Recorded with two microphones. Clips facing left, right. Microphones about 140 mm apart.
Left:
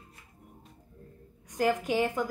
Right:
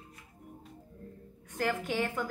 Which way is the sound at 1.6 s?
15° left (ahead or behind).